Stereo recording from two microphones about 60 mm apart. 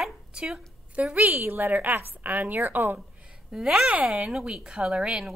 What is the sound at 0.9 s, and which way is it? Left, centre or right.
A woman's voice, right.